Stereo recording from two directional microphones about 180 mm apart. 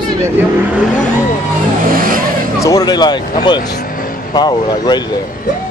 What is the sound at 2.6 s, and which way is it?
Speech, 20° left (ahead or behind).